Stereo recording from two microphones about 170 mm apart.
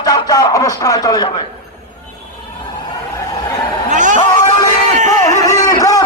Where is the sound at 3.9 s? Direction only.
45° right (ahead or behind).